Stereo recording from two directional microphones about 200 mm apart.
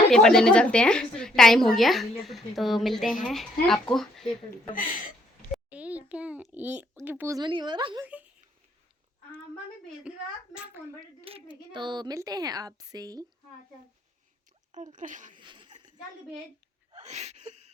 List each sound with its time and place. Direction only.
0.1 s a woman's voice: centre (ahead or behind)
4.7 s speech: 45° left (ahead or behind)
5.7 s a child's voice: 5° right (ahead or behind); by 8.0 s 25° right (ahead or behind)
8.0 s a child's voice: 5° right (ahead or behind)
10.1 s a woman's voice: 5° right (ahead or behind)
11.0 s speech: 25° right (ahead or behind)
14.7 s speech: 40° right (ahead or behind)
15.4 s speech: 25° right (ahead or behind)
16.9 s a sound: 35° right (ahead or behind)